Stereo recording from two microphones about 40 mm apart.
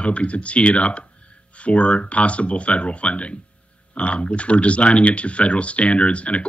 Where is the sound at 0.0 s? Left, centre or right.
Left.